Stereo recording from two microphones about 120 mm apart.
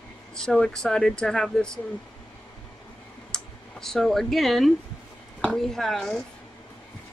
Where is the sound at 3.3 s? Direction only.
5° left (ahead or behind).